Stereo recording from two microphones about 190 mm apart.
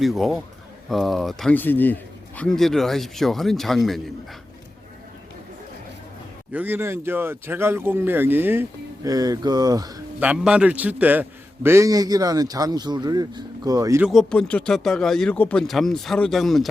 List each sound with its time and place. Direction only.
0.0 s a man's voice: centre (ahead or behind)
6.5 s a man's voice: 10° right (ahead or behind)
10.2 s a man's voice: 5° right (ahead or behind)
14.0 s a man's voice: centre (ahead or behind)